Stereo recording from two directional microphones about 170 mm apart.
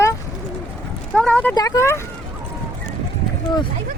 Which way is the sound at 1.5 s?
20° left (ahead or behind).